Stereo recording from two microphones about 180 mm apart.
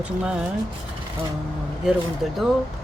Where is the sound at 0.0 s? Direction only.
5° right (ahead or behind).